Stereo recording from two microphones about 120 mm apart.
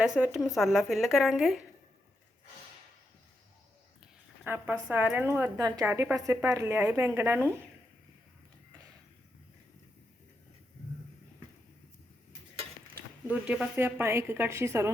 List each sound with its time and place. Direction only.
0.0 s a woman's voice: 10° right (ahead or behind)
4.4 s a woman's voice: 15° right (ahead or behind)
5.5 s a woman's voice: 30° right (ahead or behind)
5.8 s a woman's voice: 15° right (ahead or behind)
13.2 s a woman's voice: 10° right (ahead or behind)